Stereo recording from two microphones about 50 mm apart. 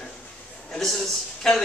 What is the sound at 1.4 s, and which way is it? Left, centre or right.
Speech, centre.